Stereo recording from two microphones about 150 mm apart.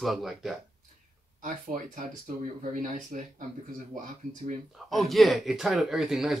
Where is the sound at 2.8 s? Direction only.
60° right (ahead or behind).